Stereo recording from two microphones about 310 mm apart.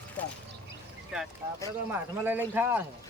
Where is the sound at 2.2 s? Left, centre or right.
Centre.